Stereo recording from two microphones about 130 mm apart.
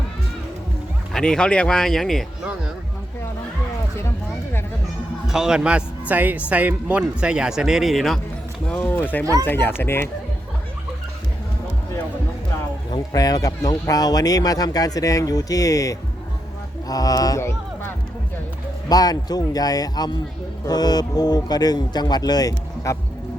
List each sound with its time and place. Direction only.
1.1 s speech: 5° left (ahead or behind)
5.2 s speech: 5° right (ahead or behind); by 10.1 s 20° left (ahead or behind)
13.1 s speech: 30° left (ahead or behind)